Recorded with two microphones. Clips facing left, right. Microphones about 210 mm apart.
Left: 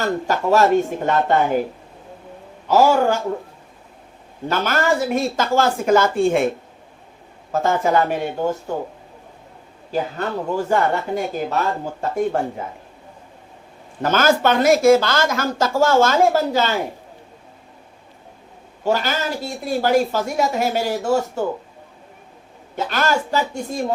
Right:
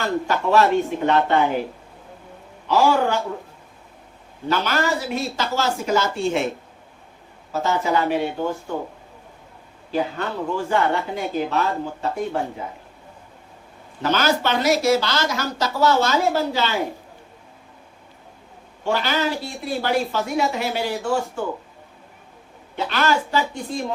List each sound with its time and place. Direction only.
0.0 s speech: 40° left (ahead or behind)
2.6 s speech: 45° left (ahead or behind)
4.4 s speech: 50° left (ahead or behind)
7.5 s speech: 50° left (ahead or behind)
9.9 s speech: 45° left (ahead or behind)
14.0 s speech: 50° left (ahead or behind)
18.9 s speech: 45° left (ahead or behind)
22.7 s speech: 45° left (ahead or behind)